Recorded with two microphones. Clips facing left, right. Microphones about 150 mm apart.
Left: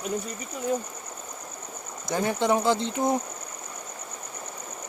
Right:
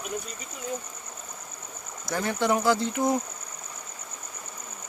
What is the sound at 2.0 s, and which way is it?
Speech, 20° left (ahead or behind).